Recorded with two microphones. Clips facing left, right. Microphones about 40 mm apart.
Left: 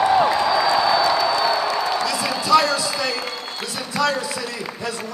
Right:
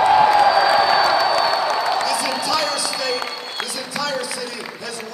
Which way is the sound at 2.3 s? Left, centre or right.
Left.